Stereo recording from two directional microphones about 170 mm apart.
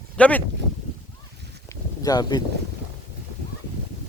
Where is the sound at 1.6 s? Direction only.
20° left (ahead or behind).